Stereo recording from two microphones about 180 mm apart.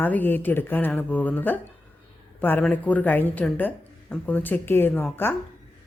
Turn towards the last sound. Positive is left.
turn(degrees=10)  # may be behind; listen again after turning